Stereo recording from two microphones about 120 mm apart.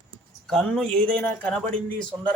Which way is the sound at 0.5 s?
5° left (ahead or behind).